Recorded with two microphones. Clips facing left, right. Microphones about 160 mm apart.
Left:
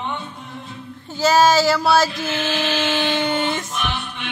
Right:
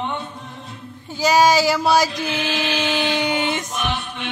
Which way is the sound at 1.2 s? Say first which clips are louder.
Left 1 dB; 15° right (ahead or behind).